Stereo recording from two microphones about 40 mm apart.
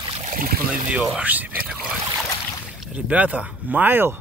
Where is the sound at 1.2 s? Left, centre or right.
Right.